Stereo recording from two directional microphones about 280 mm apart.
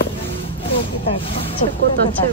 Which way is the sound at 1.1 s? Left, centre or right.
Centre.